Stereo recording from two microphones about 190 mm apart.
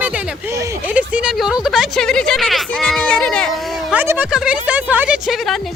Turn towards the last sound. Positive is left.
turn(degrees=0)  # may be behind; listen again after turning